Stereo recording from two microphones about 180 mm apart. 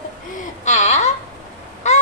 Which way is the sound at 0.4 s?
40° left (ahead or behind).